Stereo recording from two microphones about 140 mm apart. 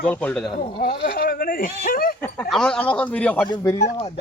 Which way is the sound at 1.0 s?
90° left.